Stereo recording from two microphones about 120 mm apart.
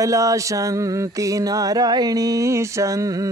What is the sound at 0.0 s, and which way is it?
Mantra, 25° right (ahead or behind).